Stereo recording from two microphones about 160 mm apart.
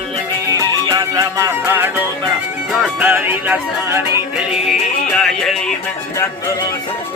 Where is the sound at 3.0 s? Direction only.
10° right (ahead or behind).